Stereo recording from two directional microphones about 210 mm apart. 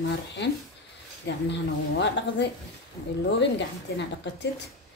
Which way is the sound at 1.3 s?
55° left (ahead or behind).